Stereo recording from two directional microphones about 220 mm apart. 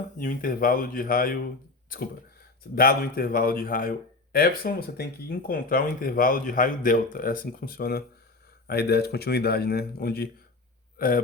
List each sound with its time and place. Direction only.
0.2 s speech: 40° left (ahead or behind)
2.7 s a man's voice: 40° left (ahead or behind)